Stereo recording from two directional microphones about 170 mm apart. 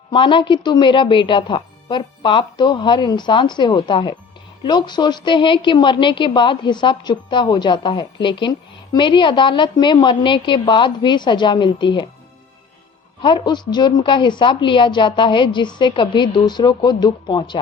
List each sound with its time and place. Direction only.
0.1 s a woman's voice: 30° left (ahead or behind)
13.2 s a woman's voice: 25° left (ahead or behind)